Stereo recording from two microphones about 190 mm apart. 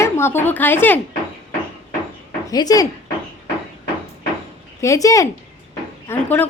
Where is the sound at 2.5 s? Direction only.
20° left (ahead or behind).